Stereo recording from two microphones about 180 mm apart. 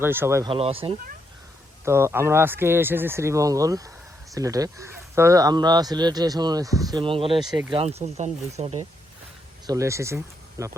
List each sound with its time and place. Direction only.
0.0 s speech: 10° right (ahead or behind)
0.5 s speech: 30° right (ahead or behind)
1.8 s speech: 15° right (ahead or behind); by 8.9 s 35° right (ahead or behind)
9.6 s speech: 15° right (ahead or behind)